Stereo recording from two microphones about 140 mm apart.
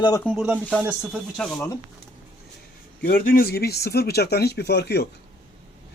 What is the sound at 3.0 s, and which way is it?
Speech, 90° left.